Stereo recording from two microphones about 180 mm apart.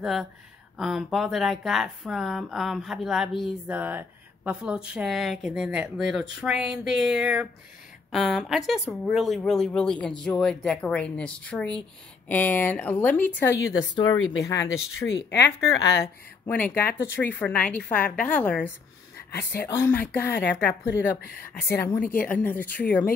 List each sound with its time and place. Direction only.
0.0 s speech: centre (ahead or behind); by 14.1 s 20° left (ahead or behind)
14.1 s speech: 90° left
16.0 s speech: 10° left (ahead or behind)
19.7 s speech: 10° left (ahead or behind)